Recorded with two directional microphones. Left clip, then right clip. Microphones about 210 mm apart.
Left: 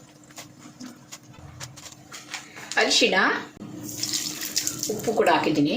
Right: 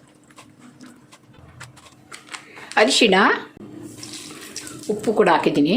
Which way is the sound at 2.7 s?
50° right (ahead or behind).